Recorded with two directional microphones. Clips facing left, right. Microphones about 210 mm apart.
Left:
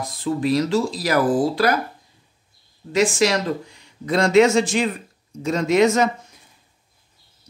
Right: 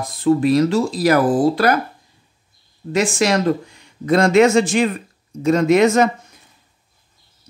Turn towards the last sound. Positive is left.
turn(degrees=-55)  # may be behind; listen again after turning